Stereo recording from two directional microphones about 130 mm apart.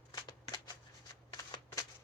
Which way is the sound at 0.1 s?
30° left (ahead or behind).